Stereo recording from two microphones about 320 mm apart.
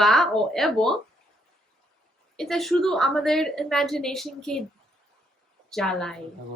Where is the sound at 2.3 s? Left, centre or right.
Centre.